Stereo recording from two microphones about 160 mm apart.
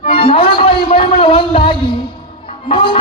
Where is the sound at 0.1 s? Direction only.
35° left (ahead or behind).